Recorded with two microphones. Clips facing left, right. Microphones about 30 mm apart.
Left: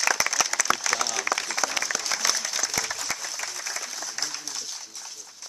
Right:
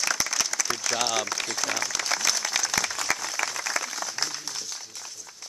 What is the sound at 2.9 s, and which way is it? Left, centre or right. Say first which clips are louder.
Applause: right 4 dB; right.